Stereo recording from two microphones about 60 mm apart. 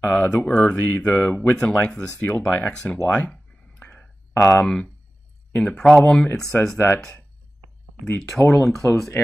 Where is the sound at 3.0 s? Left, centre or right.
Left.